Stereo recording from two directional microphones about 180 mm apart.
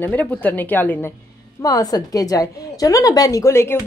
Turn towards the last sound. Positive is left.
turn(degrees=15)  # may be behind; listen again after turning